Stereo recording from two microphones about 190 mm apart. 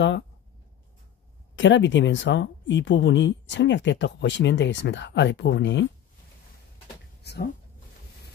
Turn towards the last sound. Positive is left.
turn(degrees=60)  # may be behind; listen again after turning